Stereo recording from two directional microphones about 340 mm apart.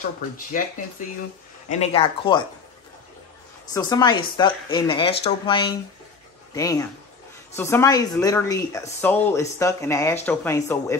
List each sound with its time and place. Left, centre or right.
1.7 s speech: centre
3.7 s speech: centre